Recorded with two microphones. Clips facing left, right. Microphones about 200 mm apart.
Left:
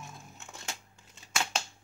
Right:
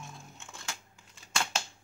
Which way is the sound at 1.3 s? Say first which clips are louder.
Even; 5° left (ahead or behind).